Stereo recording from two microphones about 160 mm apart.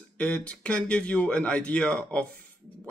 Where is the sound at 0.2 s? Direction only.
5° left (ahead or behind).